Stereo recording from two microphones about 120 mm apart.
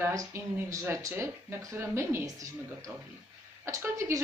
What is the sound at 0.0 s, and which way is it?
A woman's voice, 25° right (ahead or behind).